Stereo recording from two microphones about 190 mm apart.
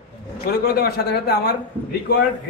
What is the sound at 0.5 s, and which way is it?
A man's voice, 55° left (ahead or behind).